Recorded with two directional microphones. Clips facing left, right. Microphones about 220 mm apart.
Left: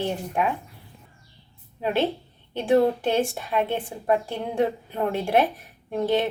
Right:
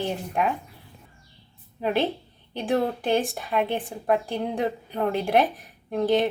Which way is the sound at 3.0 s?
Centre (ahead or behind).